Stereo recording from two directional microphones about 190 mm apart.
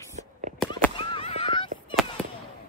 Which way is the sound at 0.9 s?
30° left (ahead or behind).